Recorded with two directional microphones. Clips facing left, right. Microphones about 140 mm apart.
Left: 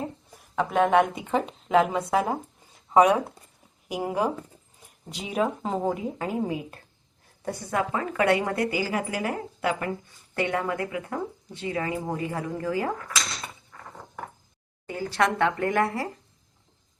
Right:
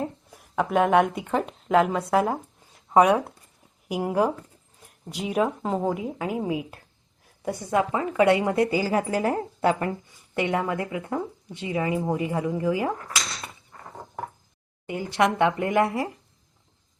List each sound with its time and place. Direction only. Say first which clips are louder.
0.0 s speech: right 3 dB; 5° right (ahead or behind)
7.4 s a woman's voice: right 4 dB; 20° right (ahead or behind)
10.3 s a woman's voice: right 2 dB; 25° right (ahead or behind)
14.8 s a woman's voice: right 2 dB; 20° right (ahead or behind)